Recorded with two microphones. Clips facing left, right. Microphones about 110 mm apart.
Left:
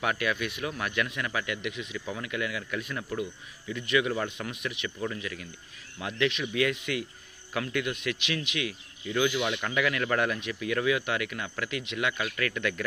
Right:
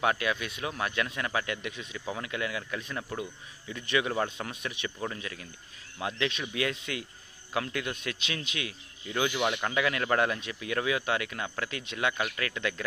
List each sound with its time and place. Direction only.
0.0 s speech: 25° right (ahead or behind)